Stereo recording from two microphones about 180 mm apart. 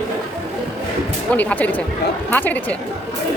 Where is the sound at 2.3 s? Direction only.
10° left (ahead or behind).